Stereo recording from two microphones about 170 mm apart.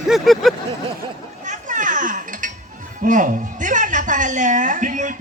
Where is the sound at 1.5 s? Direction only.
50° right (ahead or behind).